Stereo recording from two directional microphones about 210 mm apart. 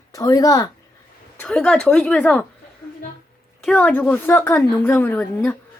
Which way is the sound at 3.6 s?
5° left (ahead or behind).